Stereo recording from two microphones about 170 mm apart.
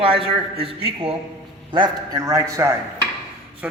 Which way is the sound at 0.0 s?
30° right (ahead or behind).